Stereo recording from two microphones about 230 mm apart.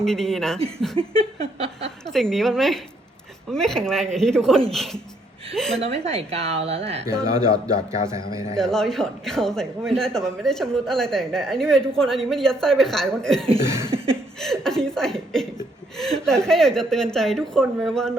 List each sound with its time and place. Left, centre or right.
0.0 s speech: centre
1.2 s a woman's voice: right
2.1 s speech: centre
5.8 s a woman's voice: right
8.1 s a man's voice: centre
8.5 s speech: centre
13.7 s a sound: centre
13.9 s a sound: right
14.3 s speech: centre